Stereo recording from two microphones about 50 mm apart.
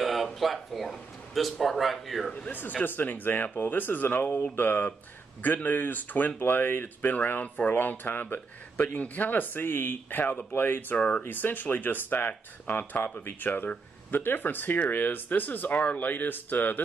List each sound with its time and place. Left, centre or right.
0.0 s speech: centre
2.8 s speech: left
11.0 s speech: left
11.2 s speech: left